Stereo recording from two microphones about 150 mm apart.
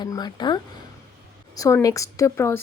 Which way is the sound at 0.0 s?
25° left (ahead or behind).